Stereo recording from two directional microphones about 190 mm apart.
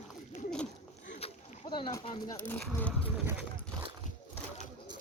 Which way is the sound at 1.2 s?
30° left (ahead or behind).